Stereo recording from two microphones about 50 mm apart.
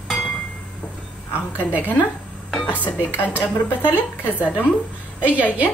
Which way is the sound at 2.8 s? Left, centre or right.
Left.